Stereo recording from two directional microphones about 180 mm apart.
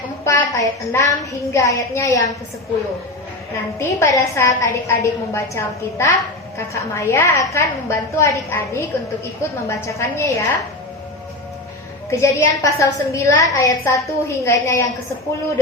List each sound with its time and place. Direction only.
0.3 s a woman's voice: 20° left (ahead or behind)
3.8 s a woman's voice: 15° left (ahead or behind)
12.2 s a woman's voice: 15° left (ahead or behind)